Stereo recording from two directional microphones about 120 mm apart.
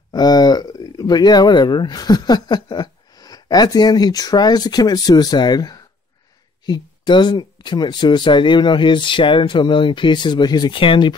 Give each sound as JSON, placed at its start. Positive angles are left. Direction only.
{"t": 0.1, "sound": "speech", "side_deg": 35}